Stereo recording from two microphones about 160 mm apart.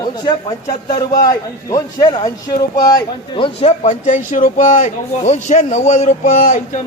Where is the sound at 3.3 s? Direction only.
35° left (ahead or behind).